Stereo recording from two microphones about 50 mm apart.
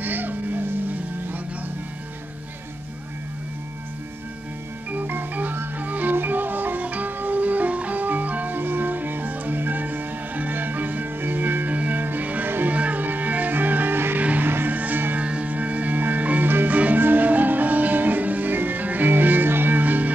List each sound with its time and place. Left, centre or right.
0.0 s music: right
4.9 s music: right
14.2 s music: right
15.1 s music: right